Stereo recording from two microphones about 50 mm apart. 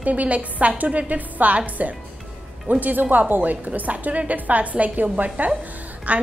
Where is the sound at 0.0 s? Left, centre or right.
Right.